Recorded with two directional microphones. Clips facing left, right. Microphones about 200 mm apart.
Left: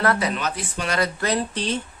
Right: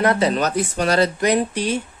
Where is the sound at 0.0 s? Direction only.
20° right (ahead or behind).